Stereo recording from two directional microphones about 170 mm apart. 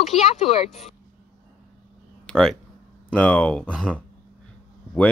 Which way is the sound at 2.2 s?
5° left (ahead or behind).